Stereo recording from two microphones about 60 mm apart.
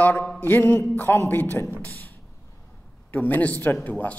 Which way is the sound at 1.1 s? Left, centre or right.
Left.